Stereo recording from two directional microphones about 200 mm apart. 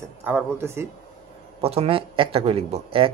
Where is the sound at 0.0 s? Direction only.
10° right (ahead or behind).